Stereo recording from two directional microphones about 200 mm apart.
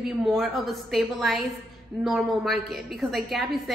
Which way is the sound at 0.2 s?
Centre (ahead or behind).